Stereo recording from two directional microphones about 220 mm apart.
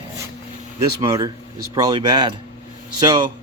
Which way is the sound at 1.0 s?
15° right (ahead or behind).